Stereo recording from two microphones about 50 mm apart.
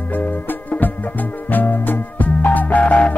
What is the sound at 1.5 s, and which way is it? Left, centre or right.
Music, left.